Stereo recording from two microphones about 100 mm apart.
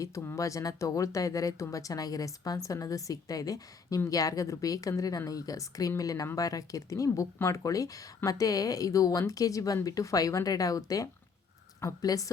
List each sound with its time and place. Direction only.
0.0 s speech: 25° left (ahead or behind)